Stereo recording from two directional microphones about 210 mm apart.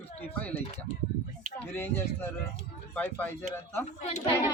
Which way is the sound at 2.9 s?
10° left (ahead or behind).